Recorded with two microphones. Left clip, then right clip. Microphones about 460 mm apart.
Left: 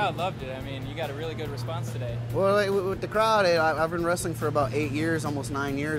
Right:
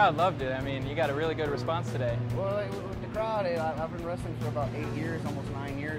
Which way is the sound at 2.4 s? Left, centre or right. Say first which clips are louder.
Left 11 dB; left.